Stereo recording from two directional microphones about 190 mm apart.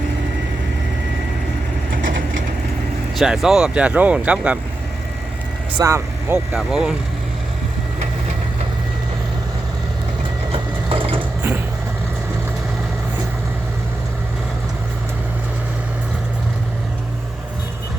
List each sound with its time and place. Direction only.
3.2 s speech: centre (ahead or behind)
5.7 s speech: 15° right (ahead or behind)
10.5 s sewing machine: 30° right (ahead or behind)
11.2 s mechanisms: 10° right (ahead or behind)